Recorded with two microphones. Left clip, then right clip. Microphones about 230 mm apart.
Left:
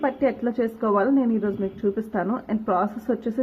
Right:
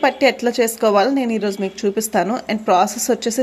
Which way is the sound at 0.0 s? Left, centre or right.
Right.